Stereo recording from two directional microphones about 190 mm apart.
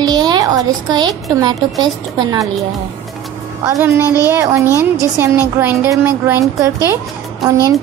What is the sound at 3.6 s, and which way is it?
Speech, 15° right (ahead or behind).